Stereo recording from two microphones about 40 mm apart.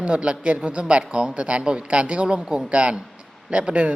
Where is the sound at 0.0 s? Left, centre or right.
Right.